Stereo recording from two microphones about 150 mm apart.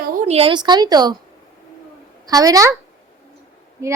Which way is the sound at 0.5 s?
30° right (ahead or behind).